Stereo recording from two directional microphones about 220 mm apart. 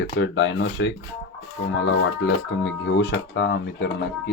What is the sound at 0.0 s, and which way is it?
Speech, 55° left (ahead or behind).